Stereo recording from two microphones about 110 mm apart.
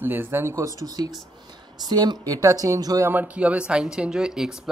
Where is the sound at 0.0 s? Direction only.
20° right (ahead or behind).